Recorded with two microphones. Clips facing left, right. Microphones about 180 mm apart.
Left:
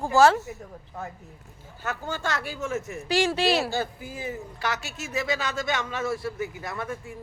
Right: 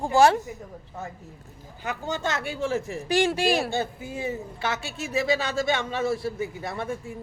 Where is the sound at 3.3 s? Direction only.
50° right (ahead or behind).